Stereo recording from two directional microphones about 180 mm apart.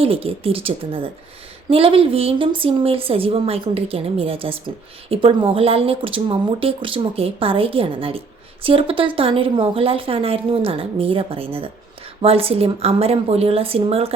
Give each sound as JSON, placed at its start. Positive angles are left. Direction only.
{"t": 0.0, "sound": "a woman's voice", "side_deg": -30}